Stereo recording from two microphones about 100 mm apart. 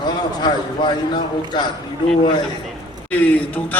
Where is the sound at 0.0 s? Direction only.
45° left (ahead or behind).